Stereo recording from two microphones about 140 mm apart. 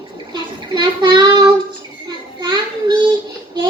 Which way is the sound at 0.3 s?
35° right (ahead or behind).